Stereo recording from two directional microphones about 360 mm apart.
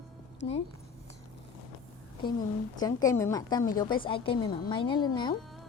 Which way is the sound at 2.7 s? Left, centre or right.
Centre.